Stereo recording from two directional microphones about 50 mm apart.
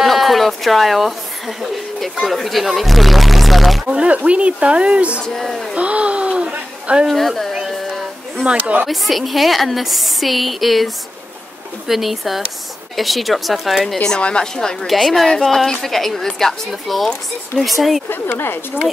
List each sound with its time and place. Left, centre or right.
0.0 s a sound: centre
1.6 s a woman's voice: centre
3.8 s speech: centre
5.2 s a woman's voice: centre
5.8 s a sound: right
7.1 s a woman's voice: centre
7.7 s a sound: centre
8.8 s a woman's voice: centre
11.9 s a woman's voice: centre
14.0 s a woman's voice: centre
14.9 s a woman's voice: centre
18.2 s speech: left